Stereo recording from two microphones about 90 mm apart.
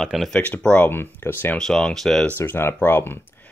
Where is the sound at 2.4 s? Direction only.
25° left (ahead or behind).